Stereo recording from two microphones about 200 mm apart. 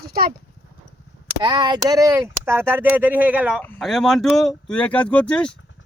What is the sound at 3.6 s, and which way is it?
Speech, 5° left (ahead or behind).